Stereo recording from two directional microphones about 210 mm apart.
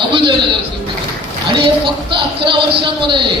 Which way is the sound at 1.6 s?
25° right (ahead or behind).